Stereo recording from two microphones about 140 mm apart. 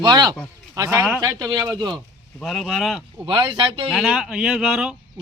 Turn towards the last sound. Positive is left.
turn(degrees=-5)  # may be behind; listen again after turning